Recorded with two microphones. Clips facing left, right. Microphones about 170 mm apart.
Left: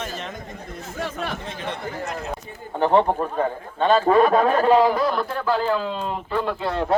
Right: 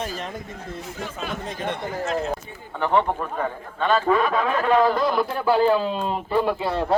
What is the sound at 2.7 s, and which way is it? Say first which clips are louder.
A man's voice: left 3 dB; 35° left (ahead or behind).